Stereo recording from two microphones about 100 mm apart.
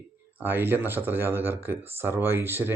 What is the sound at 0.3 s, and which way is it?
Speech, 20° right (ahead or behind).